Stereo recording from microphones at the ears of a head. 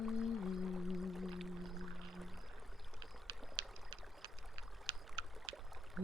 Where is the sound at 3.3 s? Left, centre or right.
Right.